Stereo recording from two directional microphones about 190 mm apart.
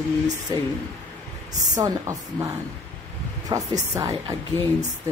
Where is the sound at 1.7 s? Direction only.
15° right (ahead or behind).